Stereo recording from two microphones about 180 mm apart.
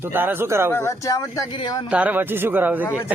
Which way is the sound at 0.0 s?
10° right (ahead or behind).